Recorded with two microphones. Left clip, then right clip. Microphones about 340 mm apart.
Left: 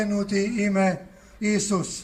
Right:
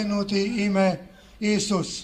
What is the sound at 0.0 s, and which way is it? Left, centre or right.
A man's voice, centre.